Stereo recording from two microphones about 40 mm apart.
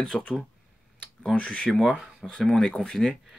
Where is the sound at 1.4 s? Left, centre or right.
Left.